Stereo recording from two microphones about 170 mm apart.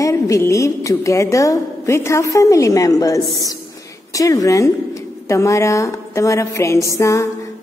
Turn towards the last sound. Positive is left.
turn(degrees=20)  # may be behind; listen again after turning